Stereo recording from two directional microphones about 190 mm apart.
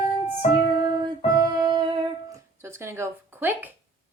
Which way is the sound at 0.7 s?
25° right (ahead or behind).